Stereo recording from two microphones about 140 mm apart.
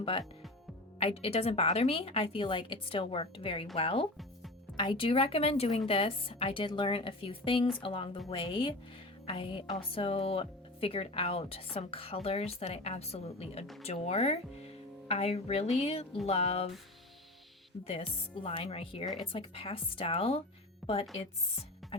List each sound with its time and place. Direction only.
0.9 s speech: 45° left (ahead or behind)
17.8 s speech: 45° left (ahead or behind)